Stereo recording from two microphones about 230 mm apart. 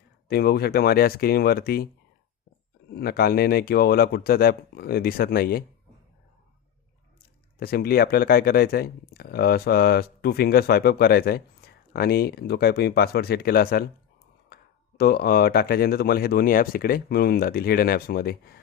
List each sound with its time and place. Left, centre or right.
0.3 s speech: left
2.9 s speech: left
7.6 s speech: left